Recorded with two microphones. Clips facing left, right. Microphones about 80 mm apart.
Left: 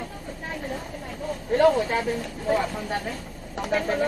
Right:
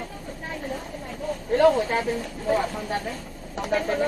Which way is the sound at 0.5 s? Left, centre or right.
Left.